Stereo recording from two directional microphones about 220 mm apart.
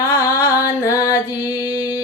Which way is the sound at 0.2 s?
15° left (ahead or behind).